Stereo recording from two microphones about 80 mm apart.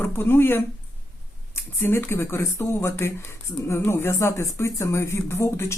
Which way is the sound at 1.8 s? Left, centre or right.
Left.